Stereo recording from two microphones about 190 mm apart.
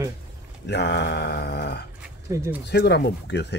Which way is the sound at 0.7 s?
65° left (ahead or behind).